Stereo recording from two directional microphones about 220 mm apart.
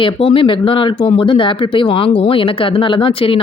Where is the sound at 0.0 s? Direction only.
25° left (ahead or behind).